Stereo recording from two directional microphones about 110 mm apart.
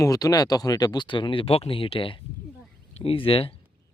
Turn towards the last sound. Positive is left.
turn(degrees=55)  # may be behind; listen again after turning